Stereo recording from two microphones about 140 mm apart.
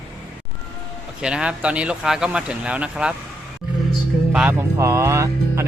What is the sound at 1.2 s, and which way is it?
Speech, 5° right (ahead or behind).